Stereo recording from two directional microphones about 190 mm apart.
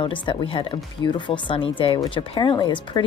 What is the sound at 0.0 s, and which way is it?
Speech, 25° left (ahead or behind).